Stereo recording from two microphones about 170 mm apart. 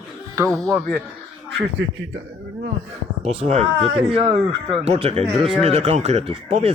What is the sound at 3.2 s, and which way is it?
Speech, 40° right (ahead or behind).